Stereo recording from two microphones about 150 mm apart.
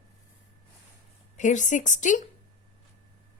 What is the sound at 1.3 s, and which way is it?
Speech, 55° left (ahead or behind).